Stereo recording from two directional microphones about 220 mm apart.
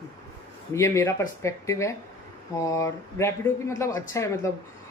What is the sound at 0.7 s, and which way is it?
Speech, 15° left (ahead or behind).